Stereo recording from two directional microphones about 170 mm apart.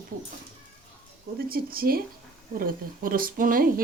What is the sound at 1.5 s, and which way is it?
A woman's voice, 60° right (ahead or behind).